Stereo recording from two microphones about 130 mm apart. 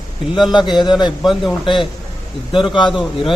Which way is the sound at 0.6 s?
35° left (ahead or behind).